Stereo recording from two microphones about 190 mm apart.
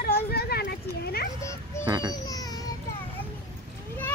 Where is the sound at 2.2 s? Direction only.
20° left (ahead or behind).